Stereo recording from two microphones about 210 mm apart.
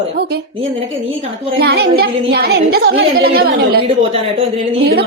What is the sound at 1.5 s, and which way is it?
A woman's voice, 50° right (ahead or behind).